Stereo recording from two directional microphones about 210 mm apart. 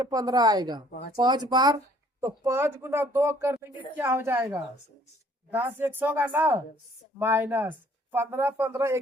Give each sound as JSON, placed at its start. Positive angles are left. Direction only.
{"t": 0.0, "sound": "speech", "side_deg": -15}